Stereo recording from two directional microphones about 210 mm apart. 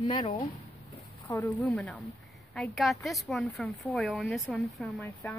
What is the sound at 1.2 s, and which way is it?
A woman's voice, 10° left (ahead or behind).